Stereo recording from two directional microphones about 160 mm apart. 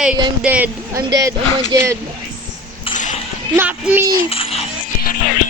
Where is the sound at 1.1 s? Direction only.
20° right (ahead or behind).